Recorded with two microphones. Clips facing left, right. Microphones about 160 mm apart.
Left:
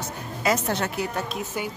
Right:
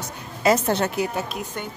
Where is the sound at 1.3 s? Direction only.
5° left (ahead or behind).